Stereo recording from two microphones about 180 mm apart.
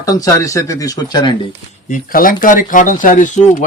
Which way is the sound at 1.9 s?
50° left (ahead or behind).